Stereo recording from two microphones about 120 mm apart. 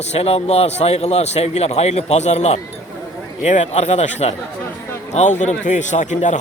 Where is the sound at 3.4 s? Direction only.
80° left.